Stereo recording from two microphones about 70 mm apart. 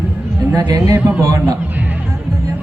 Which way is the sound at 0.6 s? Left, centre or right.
Right.